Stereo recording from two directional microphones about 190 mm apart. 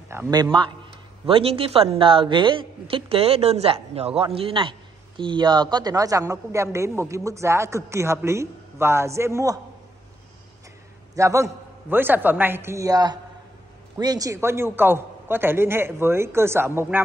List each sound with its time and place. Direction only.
0.1 s a man's voice: 15° right (ahead or behind)
11.1 s a man's voice: 15° right (ahead or behind)